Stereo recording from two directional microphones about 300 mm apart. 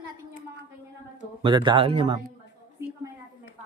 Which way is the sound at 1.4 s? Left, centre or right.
Centre.